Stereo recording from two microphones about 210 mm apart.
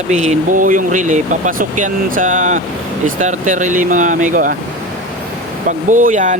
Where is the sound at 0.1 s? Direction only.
35° right (ahead or behind).